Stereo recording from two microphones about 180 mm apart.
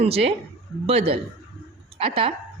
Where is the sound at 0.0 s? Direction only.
35° right (ahead or behind).